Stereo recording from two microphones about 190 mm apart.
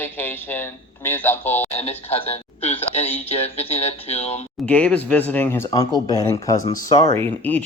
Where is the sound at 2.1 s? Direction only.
35° left (ahead or behind).